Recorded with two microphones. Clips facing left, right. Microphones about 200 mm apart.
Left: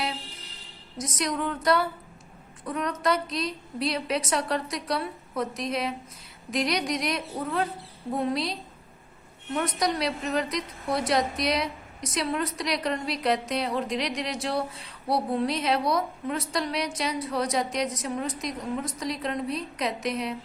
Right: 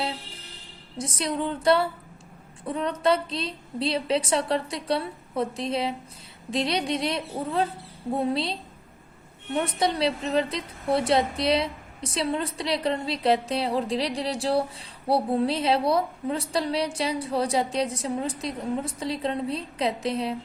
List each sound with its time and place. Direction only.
0.9 s a woman's voice: 30° right (ahead or behind)